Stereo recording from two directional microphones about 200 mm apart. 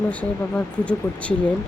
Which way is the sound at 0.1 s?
5° left (ahead or behind).